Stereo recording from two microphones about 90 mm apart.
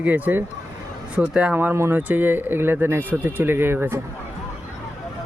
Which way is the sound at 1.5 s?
25° right (ahead or behind).